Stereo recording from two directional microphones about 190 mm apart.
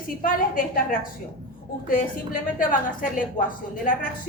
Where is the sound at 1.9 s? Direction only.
45° left (ahead or behind).